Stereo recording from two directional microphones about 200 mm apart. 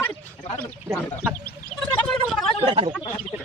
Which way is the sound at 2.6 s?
25° right (ahead or behind).